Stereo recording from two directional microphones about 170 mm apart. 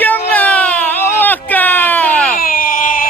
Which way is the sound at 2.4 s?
55° left (ahead or behind).